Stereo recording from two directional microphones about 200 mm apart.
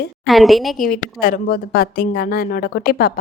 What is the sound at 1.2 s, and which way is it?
A woman's voice, 50° left (ahead or behind).